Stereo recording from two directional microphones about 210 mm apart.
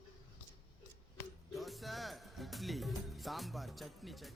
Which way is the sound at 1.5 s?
Centre (ahead or behind).